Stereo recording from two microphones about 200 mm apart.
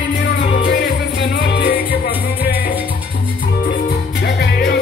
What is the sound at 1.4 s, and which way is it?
Music, 55° left (ahead or behind).